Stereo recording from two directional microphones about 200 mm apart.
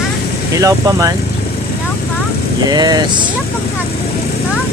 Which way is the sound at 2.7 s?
20° right (ahead or behind).